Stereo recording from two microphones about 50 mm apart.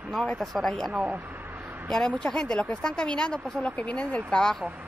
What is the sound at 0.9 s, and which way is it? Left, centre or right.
Speech, right.